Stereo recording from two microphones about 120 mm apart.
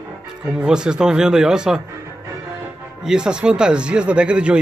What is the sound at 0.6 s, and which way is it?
Speech, 5° right (ahead or behind).